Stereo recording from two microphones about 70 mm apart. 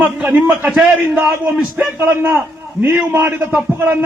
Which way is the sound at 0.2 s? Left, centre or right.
Right.